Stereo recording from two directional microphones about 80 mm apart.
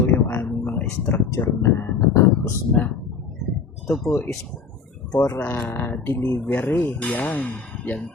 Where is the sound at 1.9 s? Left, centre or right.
Left.